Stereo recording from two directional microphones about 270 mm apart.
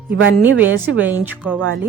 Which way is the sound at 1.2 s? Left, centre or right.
Centre.